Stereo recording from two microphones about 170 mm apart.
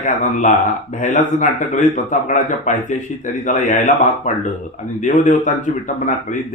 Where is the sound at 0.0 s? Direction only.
50° left (ahead or behind).